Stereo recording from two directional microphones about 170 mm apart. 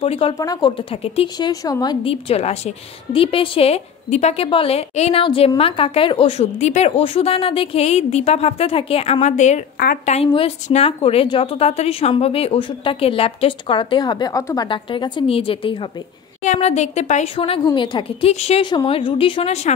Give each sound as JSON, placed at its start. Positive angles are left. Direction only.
{"t": 0.0, "sound": "a woman's voice", "side_deg": 35}
{"t": 2.2, "sound": "a woman's voice", "side_deg": 40}
{"t": 16.4, "sound": "a woman's voice", "side_deg": 45}
{"t": 17.6, "sound": "a woman's voice", "side_deg": 30}